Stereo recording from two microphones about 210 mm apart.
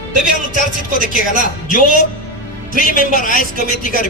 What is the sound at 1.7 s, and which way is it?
A man's voice, 40° left (ahead or behind).